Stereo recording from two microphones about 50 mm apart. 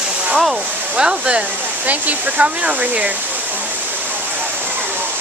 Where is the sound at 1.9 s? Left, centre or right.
Right.